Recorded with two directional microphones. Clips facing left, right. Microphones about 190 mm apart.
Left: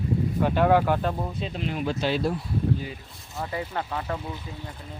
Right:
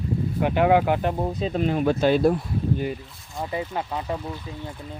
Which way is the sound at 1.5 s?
45° right (ahead or behind).